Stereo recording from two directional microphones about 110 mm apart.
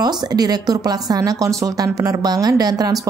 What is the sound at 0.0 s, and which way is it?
Speech, 35° right (ahead or behind).